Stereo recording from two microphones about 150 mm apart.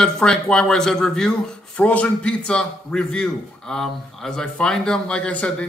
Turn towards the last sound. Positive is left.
turn(degrees=10)  # may be behind; listen again after turning